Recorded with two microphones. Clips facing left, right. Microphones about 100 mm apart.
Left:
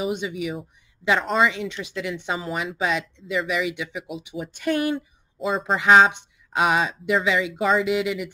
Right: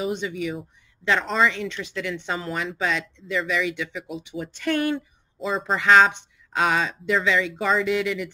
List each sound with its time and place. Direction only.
0.0 s speech: 15° left (ahead or behind)
5.8 s speech: 15° left (ahead or behind)
7.5 s speech: 5° left (ahead or behind)
7.9 s speech: 15° left (ahead or behind)